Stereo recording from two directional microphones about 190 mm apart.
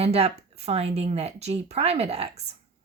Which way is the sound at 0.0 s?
30° right (ahead or behind).